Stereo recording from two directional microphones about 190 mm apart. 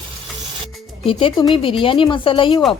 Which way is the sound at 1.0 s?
30° left (ahead or behind).